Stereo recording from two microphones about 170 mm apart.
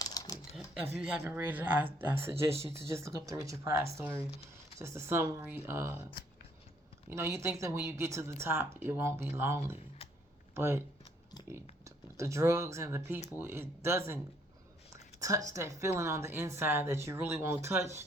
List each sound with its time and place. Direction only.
0.0 s typing: 20° left (ahead or behind)
0.5 s a sound: 5° right (ahead or behind)
0.9 s a woman's voice: 15° right (ahead or behind)
7.1 s a woman's voice: 15° right (ahead or behind)
11.4 s a sound: 25° left (ahead or behind)
11.9 s a woman's voice: 15° right (ahead or behind)
15.2 s a woman's voice: 20° right (ahead or behind)